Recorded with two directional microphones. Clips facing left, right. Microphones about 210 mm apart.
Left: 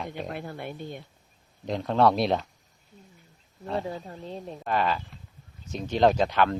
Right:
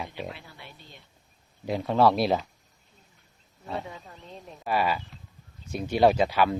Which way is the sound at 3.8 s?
35° left (ahead or behind).